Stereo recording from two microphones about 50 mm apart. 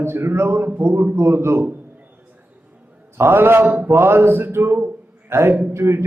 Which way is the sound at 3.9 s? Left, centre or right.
Right.